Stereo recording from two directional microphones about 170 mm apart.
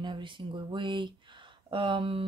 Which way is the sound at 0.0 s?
30° right (ahead or behind).